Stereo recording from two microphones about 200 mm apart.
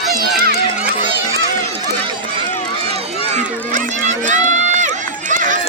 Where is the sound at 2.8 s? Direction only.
30° right (ahead or behind).